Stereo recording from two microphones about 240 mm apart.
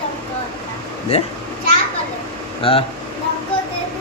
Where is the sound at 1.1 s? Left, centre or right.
Left.